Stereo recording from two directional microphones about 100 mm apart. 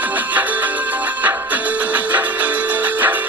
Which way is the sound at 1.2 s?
15° right (ahead or behind).